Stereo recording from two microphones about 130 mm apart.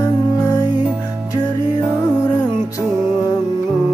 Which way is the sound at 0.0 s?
30° left (ahead or behind).